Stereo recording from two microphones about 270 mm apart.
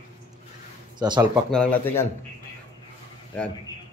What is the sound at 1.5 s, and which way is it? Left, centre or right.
Speech, centre.